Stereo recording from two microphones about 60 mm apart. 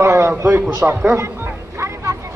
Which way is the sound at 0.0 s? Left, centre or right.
Right.